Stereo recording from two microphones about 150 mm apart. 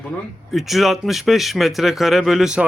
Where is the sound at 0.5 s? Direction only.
Centre (ahead or behind).